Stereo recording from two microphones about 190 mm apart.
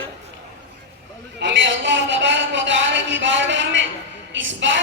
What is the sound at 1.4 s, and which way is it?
A woman's voice, 70° right (ahead or behind).